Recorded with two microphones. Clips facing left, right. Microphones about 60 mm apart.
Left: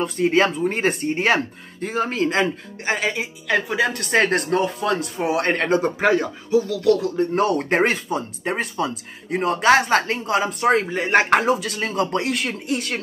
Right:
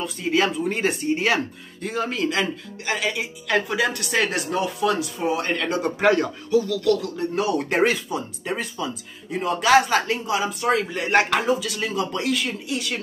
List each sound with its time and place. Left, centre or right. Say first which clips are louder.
0.2 s speech: left 3 dB; left
3.4 s speech: left 1 dB; centre
4.0 s speech: left 4 dB; left
5.9 s speech: even; centre
6.5 s music: left 2 dB; left
7.3 s speech: left 1 dB; left
10.9 s music: left 2 dB; centre
11.4 s speech: left 2 dB; left